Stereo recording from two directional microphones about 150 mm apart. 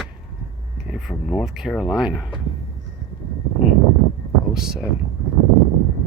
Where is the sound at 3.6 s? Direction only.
5° right (ahead or behind).